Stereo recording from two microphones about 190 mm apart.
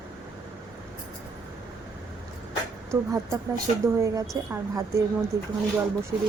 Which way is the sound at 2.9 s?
15° right (ahead or behind).